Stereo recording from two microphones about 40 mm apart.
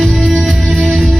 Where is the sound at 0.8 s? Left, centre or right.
Centre.